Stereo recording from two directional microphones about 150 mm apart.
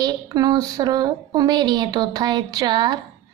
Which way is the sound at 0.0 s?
25° right (ahead or behind).